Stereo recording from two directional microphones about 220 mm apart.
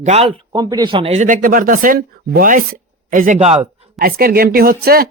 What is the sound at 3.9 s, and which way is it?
A woman's voice, 40° right (ahead or behind).